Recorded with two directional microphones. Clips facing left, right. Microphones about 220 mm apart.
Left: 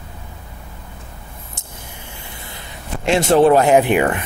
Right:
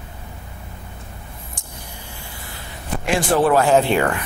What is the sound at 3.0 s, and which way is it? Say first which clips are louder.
Speech: left 5 dB; 25° left (ahead or behind).